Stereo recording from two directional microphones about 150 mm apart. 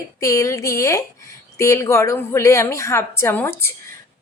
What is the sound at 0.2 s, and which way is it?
Speech, 20° left (ahead or behind).